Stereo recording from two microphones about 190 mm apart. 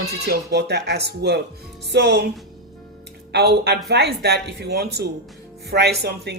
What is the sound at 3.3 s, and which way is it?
Speech, 60° right (ahead or behind).